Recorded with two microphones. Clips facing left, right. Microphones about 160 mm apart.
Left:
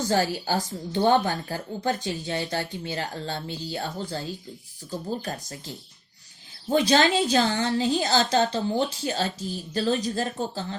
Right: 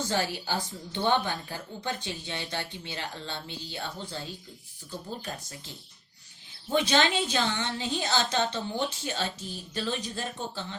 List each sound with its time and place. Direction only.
0.1 s a woman's voice: 40° left (ahead or behind)